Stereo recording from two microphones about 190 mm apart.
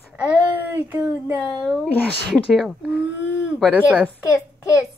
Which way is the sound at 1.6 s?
Centre (ahead or behind).